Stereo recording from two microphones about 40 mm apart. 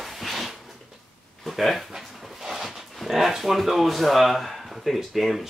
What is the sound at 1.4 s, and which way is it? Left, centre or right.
Speech, centre.